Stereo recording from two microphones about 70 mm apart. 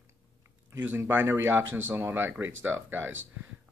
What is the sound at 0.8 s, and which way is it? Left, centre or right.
Speech, right.